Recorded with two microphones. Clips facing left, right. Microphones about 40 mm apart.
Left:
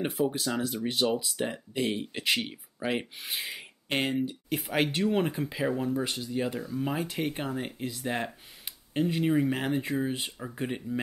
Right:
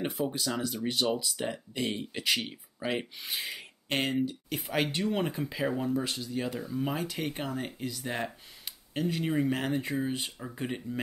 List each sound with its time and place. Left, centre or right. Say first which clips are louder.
0.2 s speech: left 5 dB; centre
0.6 s speech: left 2 dB; centre